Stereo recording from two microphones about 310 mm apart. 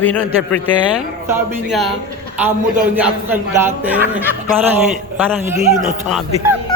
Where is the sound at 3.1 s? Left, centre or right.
Centre.